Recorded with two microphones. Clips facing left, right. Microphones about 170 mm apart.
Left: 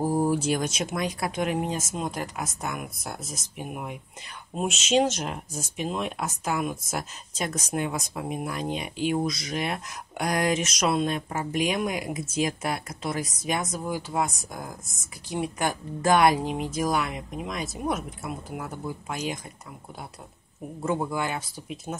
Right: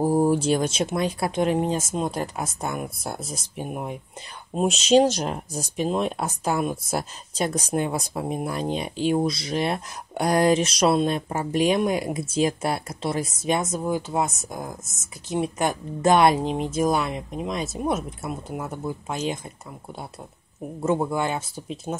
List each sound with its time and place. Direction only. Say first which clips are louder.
0.0 s speech: right 4 dB; 30° right (ahead or behind)
20.8 s speech: right 4 dB; 25° right (ahead or behind)